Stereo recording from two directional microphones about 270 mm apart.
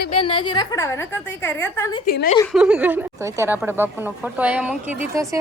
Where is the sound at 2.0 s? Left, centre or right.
Left.